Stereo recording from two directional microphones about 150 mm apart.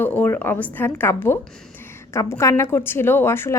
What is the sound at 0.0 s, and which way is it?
A woman's voice, 10° left (ahead or behind).